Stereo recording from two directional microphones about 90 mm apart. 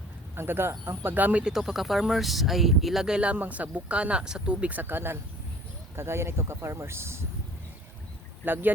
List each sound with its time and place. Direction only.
0.3 s speech: 25° right (ahead or behind)
8.4 s speech: 20° right (ahead or behind)